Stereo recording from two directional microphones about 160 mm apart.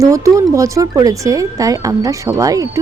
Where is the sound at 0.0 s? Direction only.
20° right (ahead or behind).